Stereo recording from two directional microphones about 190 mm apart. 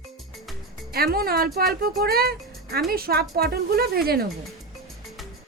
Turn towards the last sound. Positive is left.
turn(degrees=-50)  # may be behind; listen again after turning